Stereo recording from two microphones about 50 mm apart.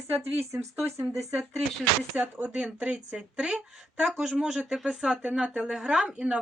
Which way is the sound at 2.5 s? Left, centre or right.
Right.